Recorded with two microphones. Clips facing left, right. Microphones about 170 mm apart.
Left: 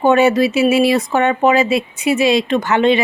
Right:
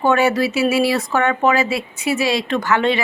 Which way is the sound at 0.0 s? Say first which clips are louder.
Left 4 dB; 20° left (ahead or behind).